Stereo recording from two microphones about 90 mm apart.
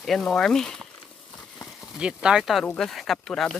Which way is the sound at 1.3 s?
Centre (ahead or behind).